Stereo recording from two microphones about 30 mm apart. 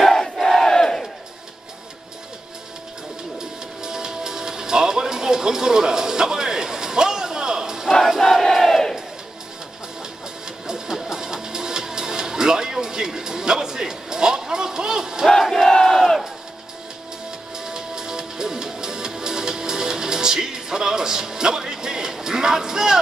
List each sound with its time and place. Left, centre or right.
0.0 s crowd: centre
3.3 s music: right
8.2 s crowd: centre
10.7 s music: centre
15.3 s battle cry: centre
17.6 s music: right